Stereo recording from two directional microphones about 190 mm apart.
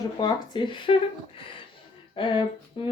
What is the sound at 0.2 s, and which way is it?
Speech, 20° left (ahead or behind).